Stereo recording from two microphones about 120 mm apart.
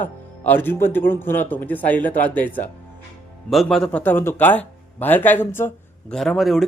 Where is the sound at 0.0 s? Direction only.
15° left (ahead or behind).